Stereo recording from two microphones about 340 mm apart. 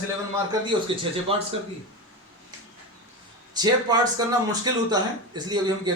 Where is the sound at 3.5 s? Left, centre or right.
Centre.